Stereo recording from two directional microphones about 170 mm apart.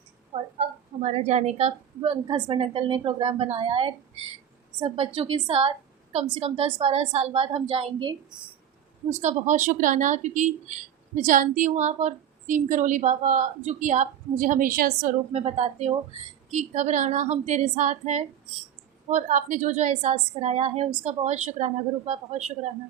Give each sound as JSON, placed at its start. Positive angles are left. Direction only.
{"t": 0.3, "sound": "a woman's voice", "side_deg": -40}
{"t": 2.2, "sound": "a woman's voice", "side_deg": -25}
{"t": 9.0, "sound": "a woman's voice", "side_deg": -45}
{"t": 15.3, "sound": "a woman's voice", "side_deg": -40}